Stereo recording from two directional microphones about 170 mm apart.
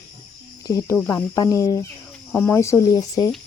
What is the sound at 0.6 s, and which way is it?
Speech, 20° left (ahead or behind).